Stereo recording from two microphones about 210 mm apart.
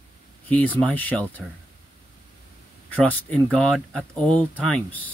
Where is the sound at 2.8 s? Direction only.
5° left (ahead or behind).